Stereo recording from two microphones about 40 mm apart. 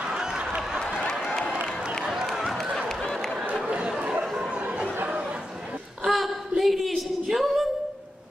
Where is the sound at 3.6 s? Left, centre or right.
Right.